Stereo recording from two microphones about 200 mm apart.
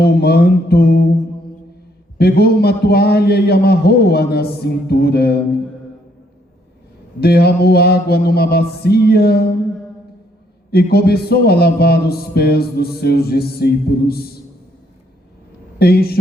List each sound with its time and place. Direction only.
0.0 s a man's voice: 50° left (ahead or behind)
2.1 s a man's voice: 50° left (ahead or behind)
7.2 s a man's voice: 55° left (ahead or behind)
10.7 s a man's voice: 50° left (ahead or behind)
15.8 s a man's voice: 50° left (ahead or behind)